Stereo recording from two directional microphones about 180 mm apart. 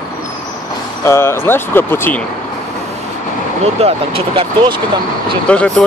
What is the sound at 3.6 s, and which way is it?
Speech, 35° right (ahead or behind).